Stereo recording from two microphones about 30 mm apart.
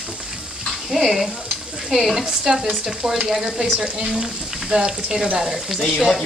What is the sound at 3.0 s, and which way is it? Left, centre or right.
Frying, right.